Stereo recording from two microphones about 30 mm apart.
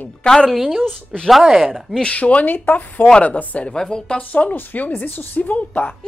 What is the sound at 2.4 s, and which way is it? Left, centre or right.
Speech, left.